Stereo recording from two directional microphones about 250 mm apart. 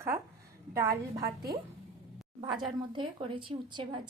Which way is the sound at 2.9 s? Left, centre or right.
Centre.